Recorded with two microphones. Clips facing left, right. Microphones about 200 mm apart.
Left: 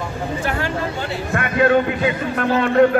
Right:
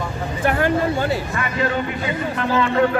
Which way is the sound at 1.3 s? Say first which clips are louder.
Left 6 dB; 60° left (ahead or behind).